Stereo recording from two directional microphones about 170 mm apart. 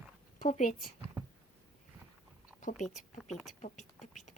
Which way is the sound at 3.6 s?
45° left (ahead or behind).